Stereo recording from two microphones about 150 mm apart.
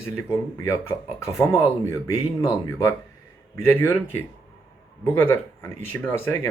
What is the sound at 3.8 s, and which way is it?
Speech, 15° left (ahead or behind).